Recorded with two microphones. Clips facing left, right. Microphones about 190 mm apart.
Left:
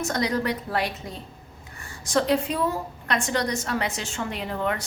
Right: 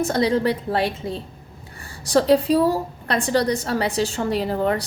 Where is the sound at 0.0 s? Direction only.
30° right (ahead or behind).